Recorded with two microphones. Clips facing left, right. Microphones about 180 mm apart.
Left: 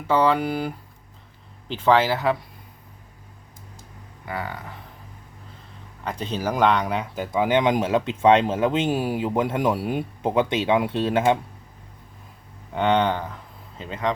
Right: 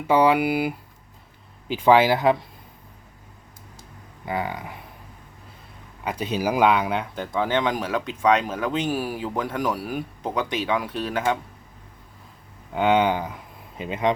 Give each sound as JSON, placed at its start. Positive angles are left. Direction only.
{"t": 0.1, "sound": "speech", "side_deg": -10}
{"t": 4.3, "sound": "speech", "side_deg": -15}
{"t": 6.1, "sound": "speech", "side_deg": -10}
{"t": 7.3, "sound": "speech", "side_deg": 15}
{"t": 12.7, "sound": "speech", "side_deg": -5}